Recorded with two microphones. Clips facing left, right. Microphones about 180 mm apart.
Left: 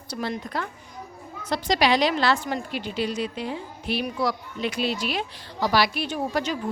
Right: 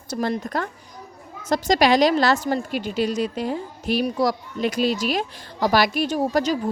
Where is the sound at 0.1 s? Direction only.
45° right (ahead or behind).